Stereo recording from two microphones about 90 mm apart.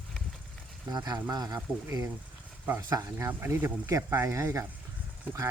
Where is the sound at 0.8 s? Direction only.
50° right (ahead or behind).